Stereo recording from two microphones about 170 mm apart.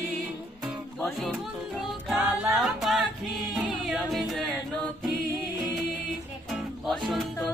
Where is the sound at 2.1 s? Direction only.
5° right (ahead or behind).